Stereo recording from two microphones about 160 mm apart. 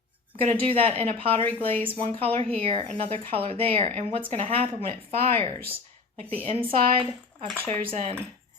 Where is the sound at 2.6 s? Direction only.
35° right (ahead or behind).